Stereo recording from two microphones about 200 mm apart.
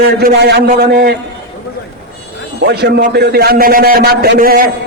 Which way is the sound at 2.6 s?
50° right (ahead or behind).